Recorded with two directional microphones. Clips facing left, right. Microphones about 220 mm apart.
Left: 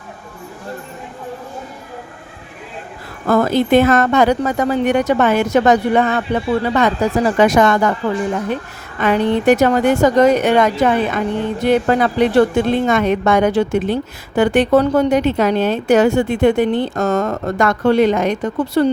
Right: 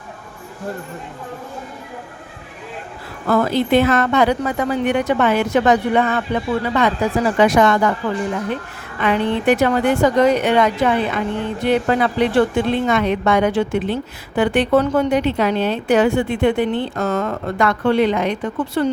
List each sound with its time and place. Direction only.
3.2 s a woman's voice: 45° left (ahead or behind)